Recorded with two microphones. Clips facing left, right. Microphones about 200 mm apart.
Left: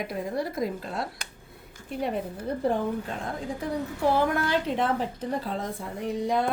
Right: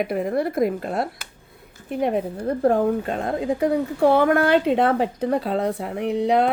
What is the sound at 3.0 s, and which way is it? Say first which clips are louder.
Speech: right 9 dB; 80° right.